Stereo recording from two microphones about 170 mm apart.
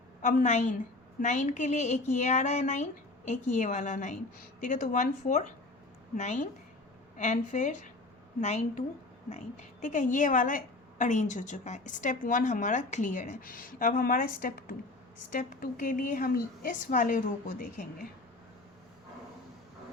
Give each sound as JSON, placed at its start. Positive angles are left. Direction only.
{"t": 0.2, "sound": "a woman's voice", "side_deg": 50}
{"t": 9.8, "sound": "a woman's voice", "side_deg": 50}